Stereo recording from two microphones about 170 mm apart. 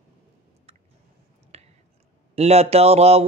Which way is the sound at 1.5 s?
35° right (ahead or behind).